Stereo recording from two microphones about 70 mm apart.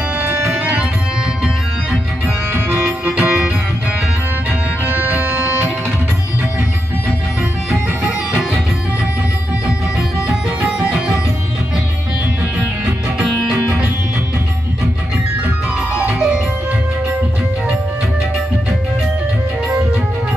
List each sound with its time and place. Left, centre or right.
0.5 s music: right
1.4 s music: centre
2.5 s music: right
4.8 s music: right
7.7 s music: centre
10.2 s music: centre